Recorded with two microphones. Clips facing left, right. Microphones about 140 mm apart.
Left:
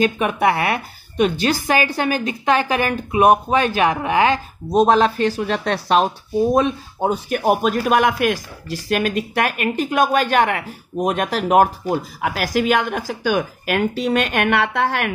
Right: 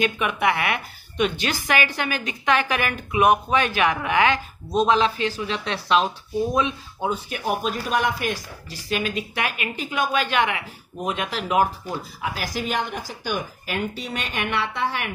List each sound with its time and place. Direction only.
0.0 s a woman's voice: 40° left (ahead or behind); by 8.4 s 75° left (ahead or behind)
8.8 s a woman's voice: 55° left (ahead or behind)